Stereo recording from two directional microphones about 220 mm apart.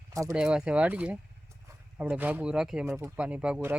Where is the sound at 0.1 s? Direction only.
15° right (ahead or behind).